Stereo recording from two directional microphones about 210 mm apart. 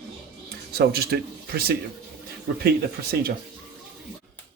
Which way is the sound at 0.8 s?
50° right (ahead or behind).